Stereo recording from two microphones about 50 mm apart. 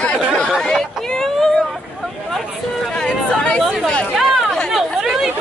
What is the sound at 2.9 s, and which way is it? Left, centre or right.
Chatter, centre.